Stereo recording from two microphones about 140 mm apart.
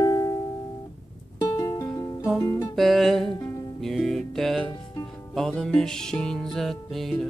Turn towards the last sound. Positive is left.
turn(degrees=0)  # may be behind; listen again after turning